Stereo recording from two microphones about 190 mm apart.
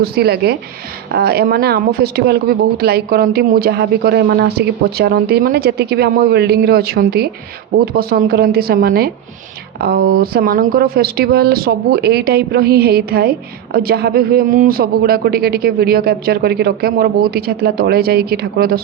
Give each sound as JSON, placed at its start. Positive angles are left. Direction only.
{"t": 0.0, "sound": "a man's voice", "side_deg": -55}